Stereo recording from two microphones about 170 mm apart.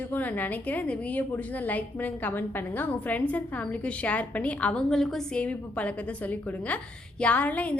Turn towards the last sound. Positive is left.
turn(degrees=10)  # may be behind; listen again after turning